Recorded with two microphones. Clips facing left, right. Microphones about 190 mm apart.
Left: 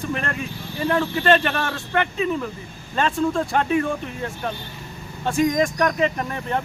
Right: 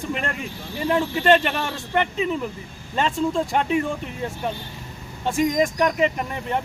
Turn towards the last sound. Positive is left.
turn(degrees=-15)  # may be behind; listen again after turning